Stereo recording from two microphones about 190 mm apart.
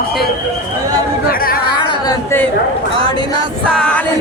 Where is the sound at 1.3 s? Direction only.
50° left (ahead or behind).